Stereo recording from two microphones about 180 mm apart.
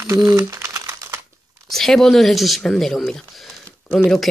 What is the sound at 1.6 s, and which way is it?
Speech, centre (ahead or behind).